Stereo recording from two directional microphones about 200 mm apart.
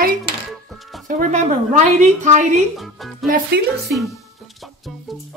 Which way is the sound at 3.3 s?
55° right (ahead or behind).